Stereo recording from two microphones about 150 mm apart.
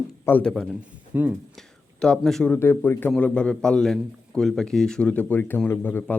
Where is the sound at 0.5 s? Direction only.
Centre (ahead or behind).